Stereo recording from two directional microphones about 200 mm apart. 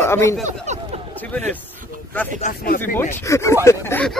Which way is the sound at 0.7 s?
35° right (ahead or behind).